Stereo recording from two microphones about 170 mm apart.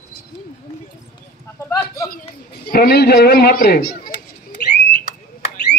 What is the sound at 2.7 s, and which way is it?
A man's voice, 65° left (ahead or behind).